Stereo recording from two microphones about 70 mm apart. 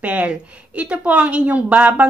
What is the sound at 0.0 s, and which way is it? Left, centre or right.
A woman's voice, right.